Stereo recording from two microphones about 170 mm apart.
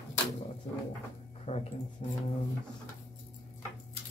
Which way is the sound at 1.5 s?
40° left (ahead or behind).